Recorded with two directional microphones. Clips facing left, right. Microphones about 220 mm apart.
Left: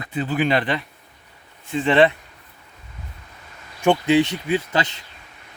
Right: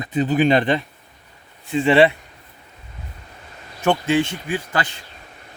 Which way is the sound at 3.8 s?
15° left (ahead or behind).